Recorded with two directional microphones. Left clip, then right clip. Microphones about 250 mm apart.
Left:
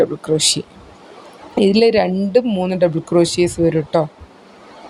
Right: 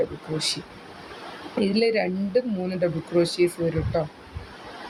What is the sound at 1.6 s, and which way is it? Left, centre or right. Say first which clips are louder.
Speech: left 10 dB; left.